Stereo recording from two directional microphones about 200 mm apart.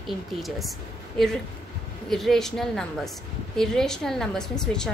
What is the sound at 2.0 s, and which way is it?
A woman's voice, centre (ahead or behind).